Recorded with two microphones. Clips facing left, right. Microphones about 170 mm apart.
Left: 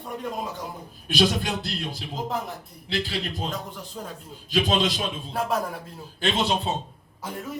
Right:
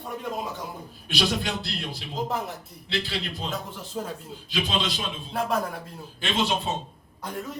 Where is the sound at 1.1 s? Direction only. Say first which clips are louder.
Left 3 dB; 45° left (ahead or behind).